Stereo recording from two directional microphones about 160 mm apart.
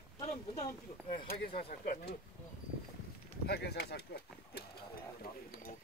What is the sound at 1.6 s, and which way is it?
Speech, 65° left (ahead or behind).